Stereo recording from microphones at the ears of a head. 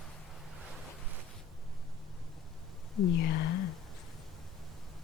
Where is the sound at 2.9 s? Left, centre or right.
Left.